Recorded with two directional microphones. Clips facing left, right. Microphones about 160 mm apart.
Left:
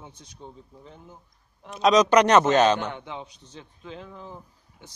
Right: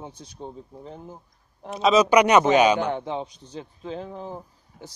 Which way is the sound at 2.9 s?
35° right (ahead or behind).